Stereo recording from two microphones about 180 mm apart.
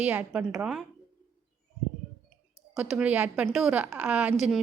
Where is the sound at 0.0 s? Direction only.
5° right (ahead or behind).